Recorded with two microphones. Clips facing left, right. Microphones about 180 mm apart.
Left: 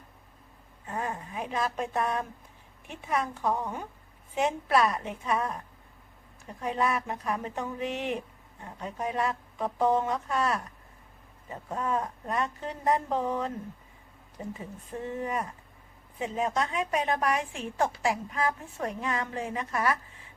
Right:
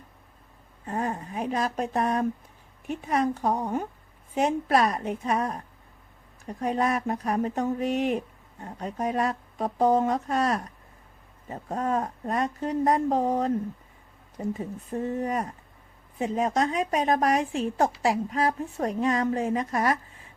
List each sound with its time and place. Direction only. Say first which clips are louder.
0.9 s a woman's voice: right 4 dB; 45° right (ahead or behind)
6.6 s a woman's voice: right 3 dB; 40° right (ahead or behind)